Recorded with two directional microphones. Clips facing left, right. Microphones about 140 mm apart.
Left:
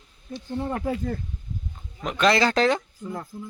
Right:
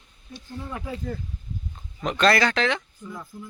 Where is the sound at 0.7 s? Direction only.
50° left (ahead or behind).